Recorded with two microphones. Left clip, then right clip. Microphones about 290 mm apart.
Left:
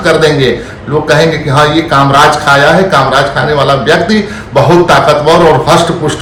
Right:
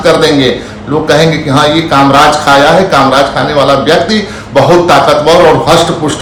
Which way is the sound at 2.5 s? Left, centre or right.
Centre.